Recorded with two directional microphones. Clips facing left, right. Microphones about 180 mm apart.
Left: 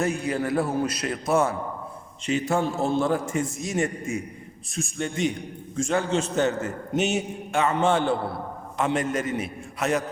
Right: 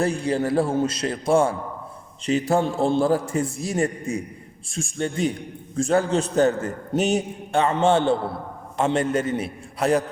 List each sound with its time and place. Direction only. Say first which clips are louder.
0.0 s a man's voice: right 3 dB; 30° right (ahead or behind)